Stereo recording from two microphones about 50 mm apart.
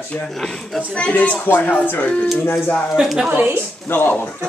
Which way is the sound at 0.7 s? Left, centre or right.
Left.